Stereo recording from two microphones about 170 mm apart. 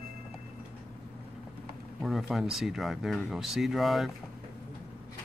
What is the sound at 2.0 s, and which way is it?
Speech, centre (ahead or behind).